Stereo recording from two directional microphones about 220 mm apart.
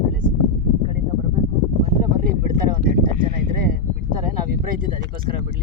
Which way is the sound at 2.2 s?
40° right (ahead or behind).